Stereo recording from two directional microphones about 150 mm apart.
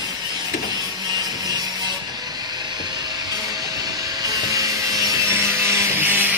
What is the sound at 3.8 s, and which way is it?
Wood, 25° right (ahead or behind).